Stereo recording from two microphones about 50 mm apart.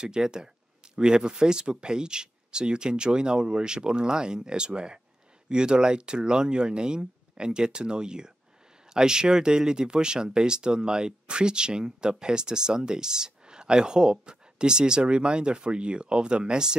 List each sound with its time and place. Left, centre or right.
0.0 s speech: centre